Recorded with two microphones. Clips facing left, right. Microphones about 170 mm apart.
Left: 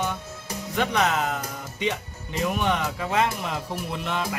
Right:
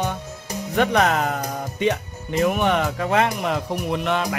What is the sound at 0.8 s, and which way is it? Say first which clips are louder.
Speech: right 5 dB; 55° right (ahead or behind).